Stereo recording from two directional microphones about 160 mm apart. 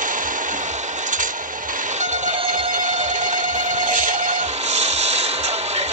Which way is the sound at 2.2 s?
55° right (ahead or behind).